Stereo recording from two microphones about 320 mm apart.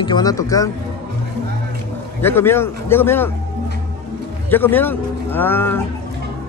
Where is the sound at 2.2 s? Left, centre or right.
Centre.